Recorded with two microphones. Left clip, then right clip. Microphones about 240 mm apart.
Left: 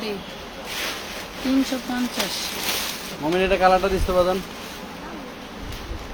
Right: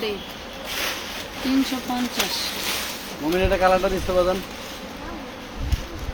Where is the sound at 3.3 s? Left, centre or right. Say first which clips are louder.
Left 1 dB; left.